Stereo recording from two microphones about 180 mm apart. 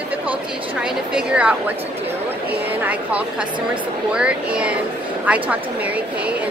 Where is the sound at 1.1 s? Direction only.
5° right (ahead or behind).